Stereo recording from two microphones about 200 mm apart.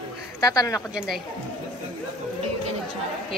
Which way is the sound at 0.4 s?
20° left (ahead or behind).